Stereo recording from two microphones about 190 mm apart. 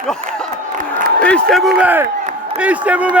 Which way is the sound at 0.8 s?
45° right (ahead or behind).